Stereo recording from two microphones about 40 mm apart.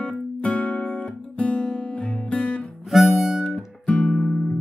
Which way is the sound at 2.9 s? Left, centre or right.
Centre.